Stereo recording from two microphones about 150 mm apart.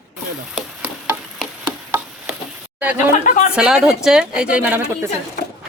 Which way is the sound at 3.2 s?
65° left (ahead or behind).